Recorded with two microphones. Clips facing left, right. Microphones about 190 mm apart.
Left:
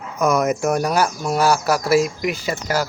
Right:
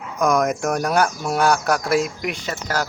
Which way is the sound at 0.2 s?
5° left (ahead or behind).